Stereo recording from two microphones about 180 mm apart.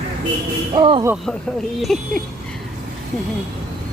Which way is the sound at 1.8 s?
Centre (ahead or behind).